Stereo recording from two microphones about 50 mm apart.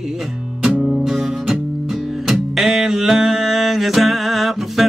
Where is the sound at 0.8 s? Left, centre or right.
Centre.